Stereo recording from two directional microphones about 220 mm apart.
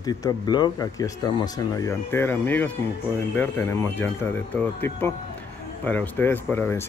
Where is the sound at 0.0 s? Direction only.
20° left (ahead or behind).